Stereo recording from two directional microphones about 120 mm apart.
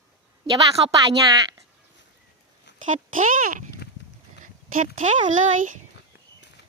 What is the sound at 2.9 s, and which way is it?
Speech, 90° right.